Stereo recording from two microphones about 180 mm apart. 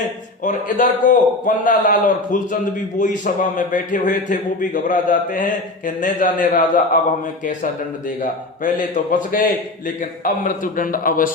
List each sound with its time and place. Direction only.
0.4 s a man's voice: 45° left (ahead or behind)
8.2 s a man's voice: 45° left (ahead or behind)